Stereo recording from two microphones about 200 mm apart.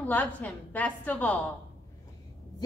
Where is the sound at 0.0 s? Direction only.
10° left (ahead or behind).